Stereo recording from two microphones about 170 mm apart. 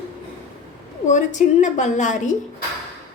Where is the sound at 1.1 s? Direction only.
45° left (ahead or behind).